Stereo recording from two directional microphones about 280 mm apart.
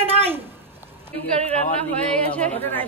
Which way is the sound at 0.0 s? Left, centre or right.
Right.